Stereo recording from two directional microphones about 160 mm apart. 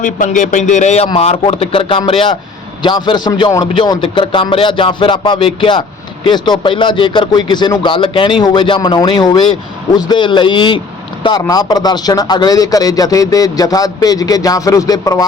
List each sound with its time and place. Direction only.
0.0 s speech: 50° left (ahead or behind)
1.0 s music: 40° left (ahead or behind)
2.8 s a man's voice: 30° left (ahead or behind)
3.5 s music: 25° left (ahead or behind)
6.2 s a man's voice: 30° left (ahead or behind)